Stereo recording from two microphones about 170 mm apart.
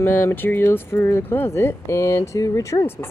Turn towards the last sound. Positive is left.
turn(degrees=15)  # may be behind; listen again after turning